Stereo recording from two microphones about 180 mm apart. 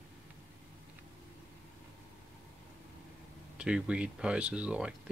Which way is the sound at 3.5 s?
5° right (ahead or behind).